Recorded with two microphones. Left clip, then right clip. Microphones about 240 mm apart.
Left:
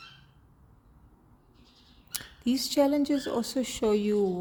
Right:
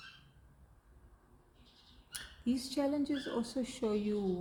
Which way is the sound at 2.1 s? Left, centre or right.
Left.